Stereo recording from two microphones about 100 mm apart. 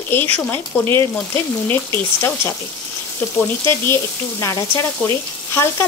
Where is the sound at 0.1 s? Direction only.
20° left (ahead or behind).